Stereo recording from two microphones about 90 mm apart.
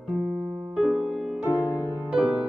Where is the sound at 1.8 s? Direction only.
10° right (ahead or behind).